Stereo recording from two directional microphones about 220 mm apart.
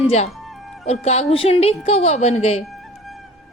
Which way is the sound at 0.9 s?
30° left (ahead or behind).